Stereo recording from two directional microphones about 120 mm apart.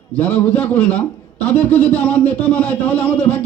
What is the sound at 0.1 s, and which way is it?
A man's voice, 15° left (ahead or behind).